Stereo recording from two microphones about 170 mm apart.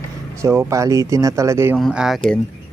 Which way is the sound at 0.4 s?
15° right (ahead or behind).